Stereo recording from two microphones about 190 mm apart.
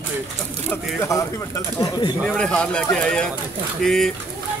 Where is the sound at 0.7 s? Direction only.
15° left (ahead or behind).